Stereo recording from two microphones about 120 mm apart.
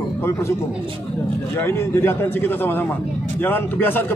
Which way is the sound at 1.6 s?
20° left (ahead or behind).